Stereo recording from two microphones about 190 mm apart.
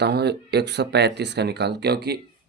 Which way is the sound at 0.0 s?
60° right (ahead or behind).